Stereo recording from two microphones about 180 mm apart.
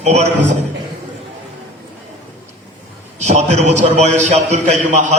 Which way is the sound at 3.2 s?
40° right (ahead or behind).